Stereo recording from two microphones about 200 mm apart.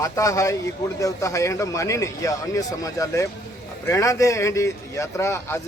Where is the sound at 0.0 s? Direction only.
15° left (ahead or behind).